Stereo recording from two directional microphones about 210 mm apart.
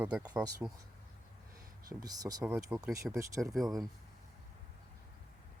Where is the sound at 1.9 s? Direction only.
15° right (ahead or behind).